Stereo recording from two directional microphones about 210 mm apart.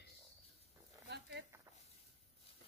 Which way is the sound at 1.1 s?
55° right (ahead or behind).